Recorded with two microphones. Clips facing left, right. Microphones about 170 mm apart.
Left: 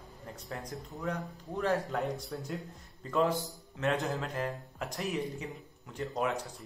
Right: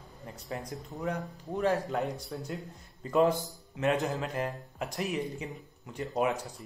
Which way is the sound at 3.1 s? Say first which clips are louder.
Right 4 dB; 20° right (ahead or behind).